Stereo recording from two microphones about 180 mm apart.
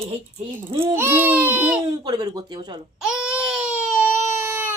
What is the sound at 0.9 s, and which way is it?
Speech, 10° right (ahead or behind).